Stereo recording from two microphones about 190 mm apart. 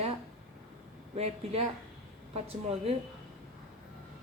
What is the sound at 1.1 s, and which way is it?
Speech, 35° right (ahead or behind).